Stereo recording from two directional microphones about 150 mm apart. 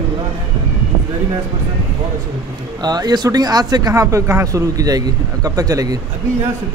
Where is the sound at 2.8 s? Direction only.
25° right (ahead or behind).